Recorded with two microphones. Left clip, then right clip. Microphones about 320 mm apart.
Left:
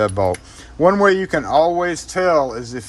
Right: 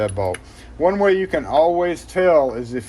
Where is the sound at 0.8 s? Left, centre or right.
Centre.